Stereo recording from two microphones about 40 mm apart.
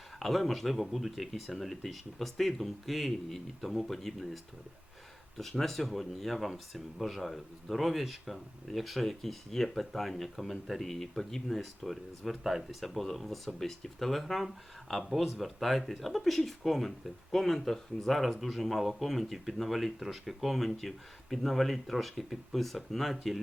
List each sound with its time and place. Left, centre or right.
0.2 s speech: centre
5.4 s speech: centre